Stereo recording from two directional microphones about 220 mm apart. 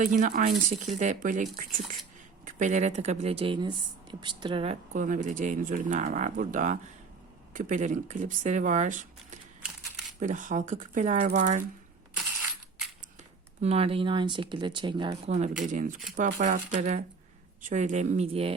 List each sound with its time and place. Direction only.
0.0 s speech: 35° right (ahead or behind)
12.1 s coin: centre (ahead or behind)
13.6 s speech: 25° right (ahead or behind)